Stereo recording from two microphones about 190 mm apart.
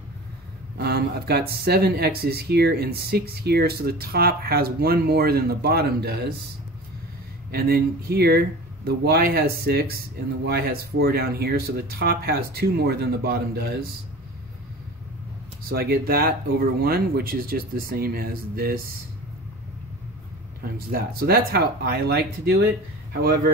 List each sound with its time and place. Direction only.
0.7 s speech: 55° right (ahead or behind)
7.5 s speech: 55° right (ahead or behind)
15.7 s speech: 55° right (ahead or behind)
20.7 s speech: 55° right (ahead or behind)